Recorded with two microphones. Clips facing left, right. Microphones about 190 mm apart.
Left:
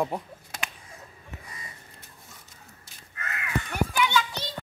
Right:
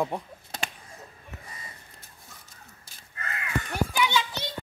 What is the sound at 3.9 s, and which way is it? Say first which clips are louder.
Children playing: left 1 dB; 20° right (ahead or behind).